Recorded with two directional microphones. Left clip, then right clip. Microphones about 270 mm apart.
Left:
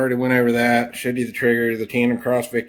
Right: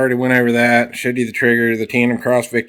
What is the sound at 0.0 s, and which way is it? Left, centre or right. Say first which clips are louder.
Speech: right 4 dB; right.